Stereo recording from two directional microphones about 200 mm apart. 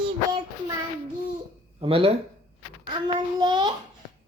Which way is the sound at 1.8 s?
25° right (ahead or behind).